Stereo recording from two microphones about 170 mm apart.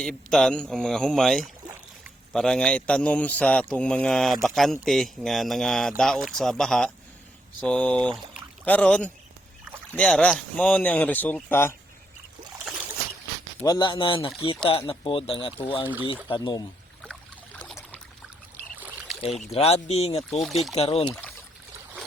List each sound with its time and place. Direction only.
0.0 s a man's voice: centre (ahead or behind)
13.7 s speech: 25° left (ahead or behind)
17.0 s trickle: 5° left (ahead or behind)
19.4 s speech: 40° left (ahead or behind)
20.4 s a man's voice: centre (ahead or behind)
20.7 s speech: 35° left (ahead or behind)